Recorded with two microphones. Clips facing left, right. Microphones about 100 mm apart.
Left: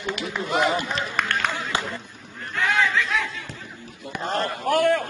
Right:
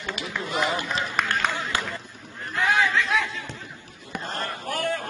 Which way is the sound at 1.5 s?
20° left (ahead or behind).